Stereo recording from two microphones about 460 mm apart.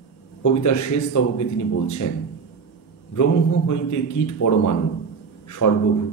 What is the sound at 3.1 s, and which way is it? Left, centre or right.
A man's voice, left.